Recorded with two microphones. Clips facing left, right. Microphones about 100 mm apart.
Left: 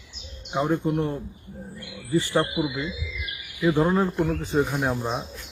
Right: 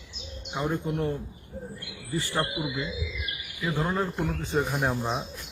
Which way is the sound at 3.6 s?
15° left (ahead or behind).